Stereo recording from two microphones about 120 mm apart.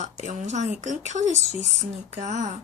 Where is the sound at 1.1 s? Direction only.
75° right (ahead or behind).